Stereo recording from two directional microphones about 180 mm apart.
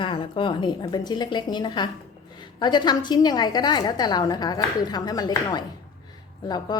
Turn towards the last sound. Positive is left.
turn(degrees=25)  # may be behind; listen again after turning